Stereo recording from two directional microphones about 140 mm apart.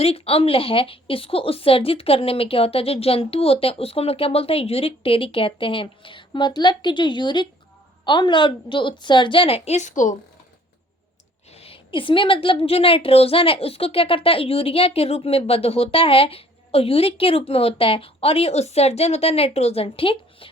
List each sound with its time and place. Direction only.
0.0 s a woman's voice: 45° left (ahead or behind); by 10.2 s 65° left (ahead or behind)
11.5 s a woman's voice: 45° left (ahead or behind)